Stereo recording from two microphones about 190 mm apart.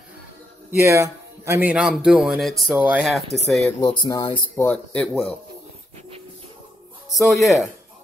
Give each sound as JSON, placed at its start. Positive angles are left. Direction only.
{"t": 0.7, "sound": "a man's voice", "side_deg": -15}
{"t": 3.8, "sound": "speech", "side_deg": 25}
{"t": 4.6, "sound": "speech", "side_deg": 5}
{"t": 7.2, "sound": "a man's voice", "side_deg": 0}